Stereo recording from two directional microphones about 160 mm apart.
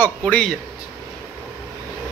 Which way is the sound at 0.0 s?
10° left (ahead or behind).